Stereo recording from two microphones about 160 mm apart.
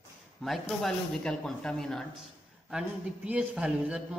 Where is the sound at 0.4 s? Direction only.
Centre (ahead or behind).